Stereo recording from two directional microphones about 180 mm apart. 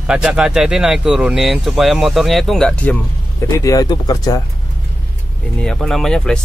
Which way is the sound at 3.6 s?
20° left (ahead or behind).